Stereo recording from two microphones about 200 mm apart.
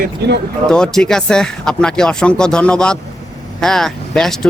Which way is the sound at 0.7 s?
5° left (ahead or behind).